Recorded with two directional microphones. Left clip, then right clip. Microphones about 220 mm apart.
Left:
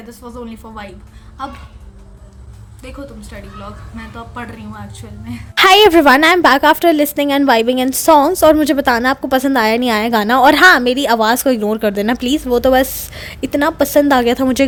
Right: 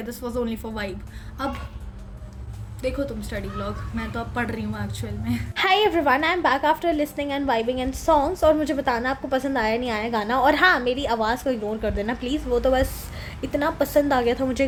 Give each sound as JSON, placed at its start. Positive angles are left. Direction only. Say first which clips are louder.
{"t": 0.1, "sound": "a woman's voice", "louder": "right 3 dB", "side_deg": -5}
{"t": 2.8, "sound": "a woman's voice", "louder": "right 5 dB", "side_deg": 0}
{"t": 5.5, "sound": "a woman's voice", "louder": "left 12 dB", "side_deg": 45}